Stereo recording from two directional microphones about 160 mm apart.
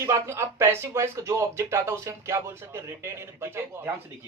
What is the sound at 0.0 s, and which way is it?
Speech, 15° right (ahead or behind).